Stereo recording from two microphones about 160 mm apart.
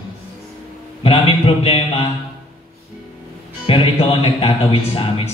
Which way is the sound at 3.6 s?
35° left (ahead or behind).